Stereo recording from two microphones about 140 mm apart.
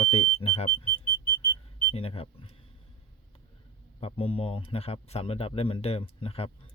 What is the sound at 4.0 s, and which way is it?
Speech, 40° left (ahead or behind).